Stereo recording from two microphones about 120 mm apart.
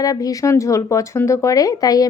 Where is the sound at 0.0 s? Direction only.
30° left (ahead or behind).